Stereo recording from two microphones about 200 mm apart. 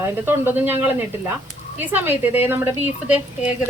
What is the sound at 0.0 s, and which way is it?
A woman's voice, 10° right (ahead or behind).